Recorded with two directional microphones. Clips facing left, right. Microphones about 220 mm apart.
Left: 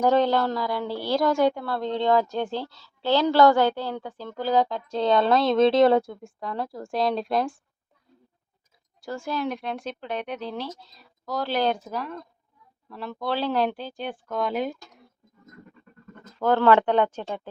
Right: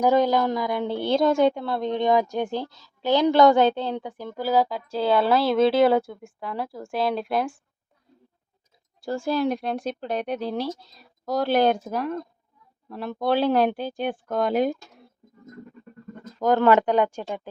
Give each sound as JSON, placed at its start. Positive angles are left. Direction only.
{"t": 0.0, "sound": "a woman's voice", "side_deg": -10}
{"t": 9.0, "sound": "speech", "side_deg": -30}
{"t": 11.3, "sound": "speech", "side_deg": -50}
{"t": 16.4, "sound": "a woman's voice", "side_deg": -15}